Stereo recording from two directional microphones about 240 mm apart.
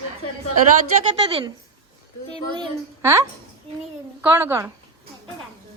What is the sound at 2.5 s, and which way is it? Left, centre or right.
A woman's voice, centre.